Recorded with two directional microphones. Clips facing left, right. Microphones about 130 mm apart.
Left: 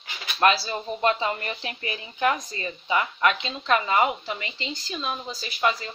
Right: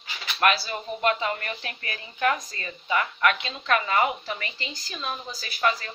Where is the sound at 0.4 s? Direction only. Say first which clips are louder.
Left 2 dB; 25° left (ahead or behind).